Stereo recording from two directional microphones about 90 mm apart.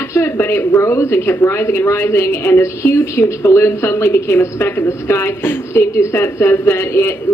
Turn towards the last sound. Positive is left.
turn(degrees=30)  # may be behind; listen again after turning